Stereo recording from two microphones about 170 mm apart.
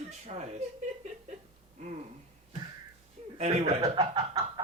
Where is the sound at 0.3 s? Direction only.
40° right (ahead or behind).